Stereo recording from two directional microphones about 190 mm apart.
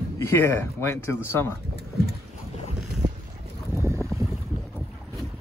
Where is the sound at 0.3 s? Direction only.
10° left (ahead or behind).